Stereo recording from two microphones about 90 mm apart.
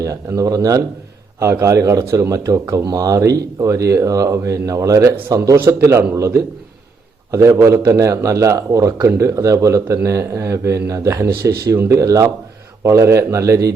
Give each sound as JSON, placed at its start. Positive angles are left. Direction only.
{"t": 0.0, "sound": "speech", "side_deg": -40}